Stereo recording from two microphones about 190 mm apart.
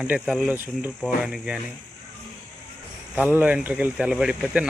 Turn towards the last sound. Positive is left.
turn(degrees=-5)  # may be behind; listen again after turning